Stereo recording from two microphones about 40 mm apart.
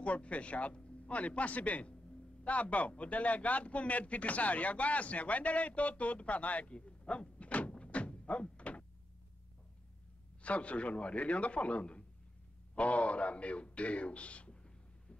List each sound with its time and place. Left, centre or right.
0.0 s speech: left
6.9 s door: left
7.8 s thunk: left
10.4 s speech: left
14.5 s a sound: left